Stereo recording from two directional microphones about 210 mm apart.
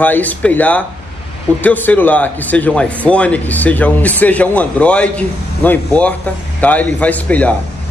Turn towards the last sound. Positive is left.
turn(degrees=5)  # may be behind; listen again after turning